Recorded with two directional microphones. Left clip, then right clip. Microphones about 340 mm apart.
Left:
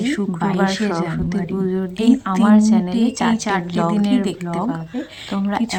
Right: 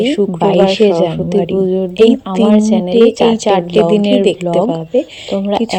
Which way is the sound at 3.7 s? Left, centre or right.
Centre.